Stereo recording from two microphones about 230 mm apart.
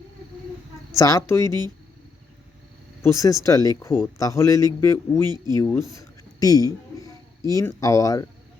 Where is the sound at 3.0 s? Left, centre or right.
Centre.